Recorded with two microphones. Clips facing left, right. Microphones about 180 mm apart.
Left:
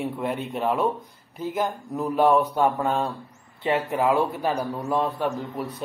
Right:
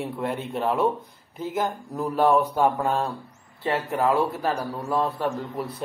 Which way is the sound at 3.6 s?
10° left (ahead or behind).